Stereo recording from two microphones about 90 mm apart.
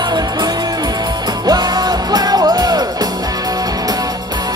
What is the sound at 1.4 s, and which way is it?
Music, 50° right (ahead or behind).